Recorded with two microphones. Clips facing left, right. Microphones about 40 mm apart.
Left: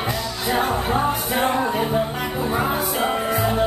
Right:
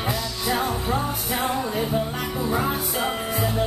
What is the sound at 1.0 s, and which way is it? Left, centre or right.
Music, left.